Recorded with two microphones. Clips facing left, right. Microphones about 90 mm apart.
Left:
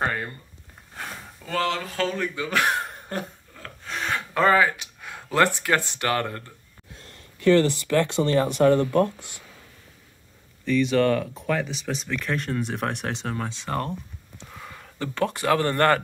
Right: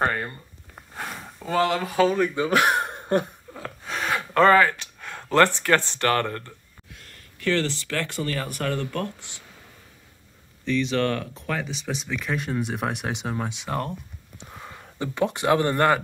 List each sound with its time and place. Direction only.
0.0 s speech: centre (ahead or behind)
0.9 s speech: 15° right (ahead or behind)
2.9 s a sound: 25° right (ahead or behind)
3.5 s gasp: 10° right (ahead or behind); by 6.4 s 10° left (ahead or behind)
7.4 s speech: 15° left (ahead or behind)
10.6 s speech: 5° left (ahead or behind)
14.4 s speech: 20° right (ahead or behind)